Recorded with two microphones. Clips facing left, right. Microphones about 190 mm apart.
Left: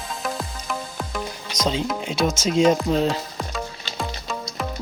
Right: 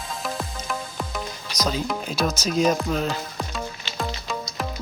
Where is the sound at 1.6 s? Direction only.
25° left (ahead or behind).